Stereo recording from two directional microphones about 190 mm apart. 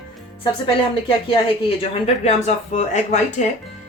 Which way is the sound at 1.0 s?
25° left (ahead or behind).